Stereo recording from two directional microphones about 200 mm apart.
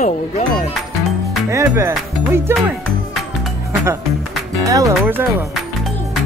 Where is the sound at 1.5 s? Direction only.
15° right (ahead or behind).